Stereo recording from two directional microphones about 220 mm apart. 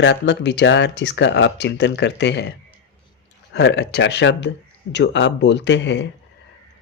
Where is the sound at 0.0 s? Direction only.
50° left (ahead or behind).